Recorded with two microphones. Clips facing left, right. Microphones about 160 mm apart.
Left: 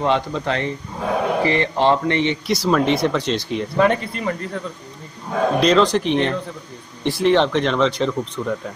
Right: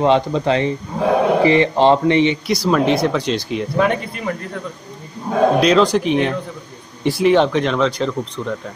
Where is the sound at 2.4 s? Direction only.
Centre (ahead or behind).